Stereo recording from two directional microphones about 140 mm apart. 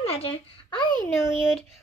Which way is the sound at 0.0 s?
45° left (ahead or behind).